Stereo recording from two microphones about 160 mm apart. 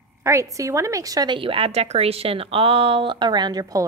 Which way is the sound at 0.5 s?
20° right (ahead or behind).